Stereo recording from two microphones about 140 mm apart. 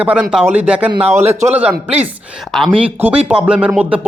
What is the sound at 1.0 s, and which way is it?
Speech, 50° right (ahead or behind).